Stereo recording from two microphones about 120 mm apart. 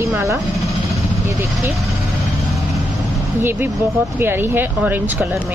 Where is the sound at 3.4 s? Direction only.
15° right (ahead or behind).